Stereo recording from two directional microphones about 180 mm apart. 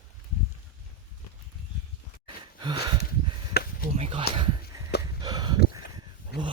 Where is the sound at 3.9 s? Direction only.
30° right (ahead or behind).